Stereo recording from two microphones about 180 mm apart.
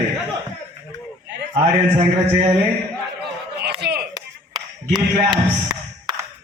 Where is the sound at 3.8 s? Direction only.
60° right (ahead or behind).